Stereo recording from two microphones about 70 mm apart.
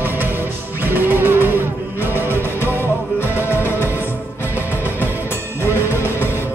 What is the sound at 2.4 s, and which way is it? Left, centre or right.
Music, left.